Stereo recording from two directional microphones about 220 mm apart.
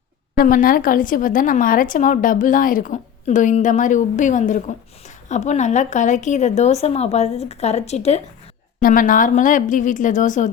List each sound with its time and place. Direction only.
0.3 s speech: 40° left (ahead or behind)